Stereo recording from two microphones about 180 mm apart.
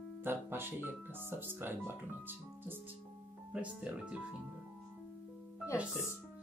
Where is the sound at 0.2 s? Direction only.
10° right (ahead or behind).